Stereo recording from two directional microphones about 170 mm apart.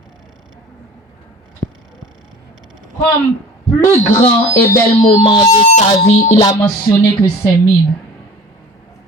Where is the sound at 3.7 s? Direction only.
15° left (ahead or behind).